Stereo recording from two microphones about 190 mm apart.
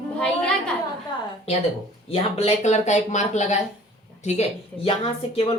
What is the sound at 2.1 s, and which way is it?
Speech, 30° left (ahead or behind).